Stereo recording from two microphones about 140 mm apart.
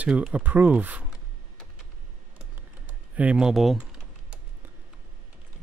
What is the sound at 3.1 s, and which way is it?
Typing, 10° right (ahead or behind).